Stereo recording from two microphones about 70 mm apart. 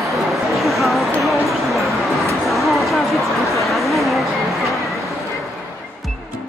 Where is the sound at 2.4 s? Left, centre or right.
Centre.